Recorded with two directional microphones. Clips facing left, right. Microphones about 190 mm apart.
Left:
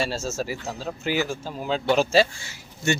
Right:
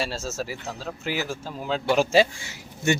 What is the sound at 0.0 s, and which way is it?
Speech, centre (ahead or behind).